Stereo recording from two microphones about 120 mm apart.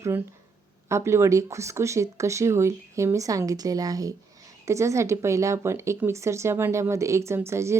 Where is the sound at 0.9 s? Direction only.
25° right (ahead or behind).